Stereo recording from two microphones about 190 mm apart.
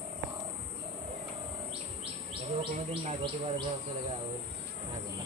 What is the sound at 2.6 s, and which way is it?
Insect, 30° right (ahead or behind).